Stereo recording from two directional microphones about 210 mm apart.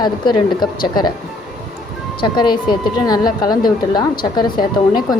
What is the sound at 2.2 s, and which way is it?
A woman's voice, 20° left (ahead or behind).